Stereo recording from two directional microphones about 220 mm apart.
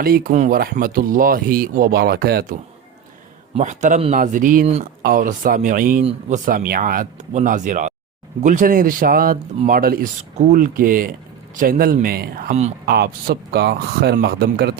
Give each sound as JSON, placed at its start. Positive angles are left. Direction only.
{"t": 0.0, "sound": "speech", "side_deg": -40}
{"t": 3.5, "sound": "speech", "side_deg": -35}